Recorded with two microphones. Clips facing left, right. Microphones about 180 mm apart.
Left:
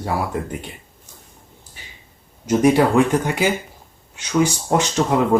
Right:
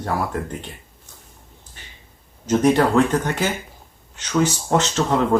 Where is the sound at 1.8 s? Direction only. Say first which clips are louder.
Left 1 dB; 10° left (ahead or behind).